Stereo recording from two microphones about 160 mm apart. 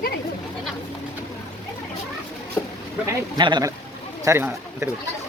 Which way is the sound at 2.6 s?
15° left (ahead or behind).